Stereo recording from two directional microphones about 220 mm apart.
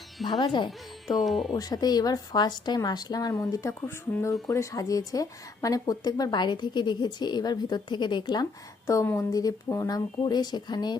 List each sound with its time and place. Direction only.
0.3 s speech: 20° left (ahead or behind)
1.0 s speech: centre (ahead or behind)
1.5 s a woman's voice: 15° left (ahead or behind)